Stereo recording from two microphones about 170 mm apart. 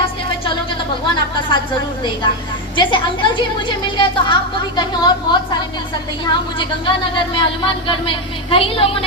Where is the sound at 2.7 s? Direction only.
30° left (ahead or behind).